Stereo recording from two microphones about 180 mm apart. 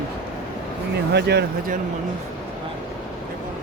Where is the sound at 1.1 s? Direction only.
65° right (ahead or behind).